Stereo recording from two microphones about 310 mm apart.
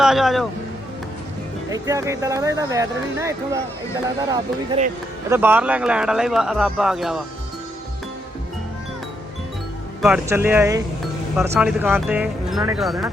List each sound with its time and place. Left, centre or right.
0.0 s speech: centre
1.7 s speech: centre
10.0 s speech: centre